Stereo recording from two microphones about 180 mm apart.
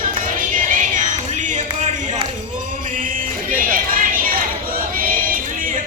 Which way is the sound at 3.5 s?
50° right (ahead or behind).